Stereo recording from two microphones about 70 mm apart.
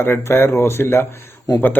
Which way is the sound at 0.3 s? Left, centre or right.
Left.